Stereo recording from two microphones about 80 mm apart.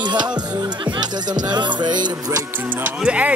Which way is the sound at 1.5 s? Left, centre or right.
Right.